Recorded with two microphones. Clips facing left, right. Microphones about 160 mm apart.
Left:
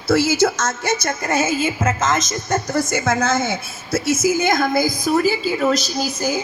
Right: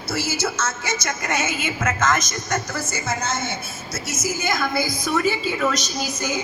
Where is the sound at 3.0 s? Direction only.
55° left (ahead or behind); by 5.8 s 30° left (ahead or behind).